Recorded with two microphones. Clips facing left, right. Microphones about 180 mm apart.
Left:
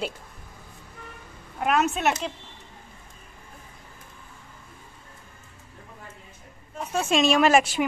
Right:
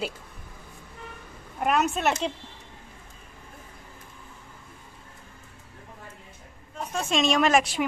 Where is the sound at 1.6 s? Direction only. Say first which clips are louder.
Left 1 dB; centre (ahead or behind).